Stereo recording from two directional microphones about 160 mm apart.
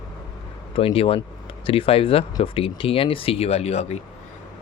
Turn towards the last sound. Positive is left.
turn(degrees=40)  # may be behind; listen again after turning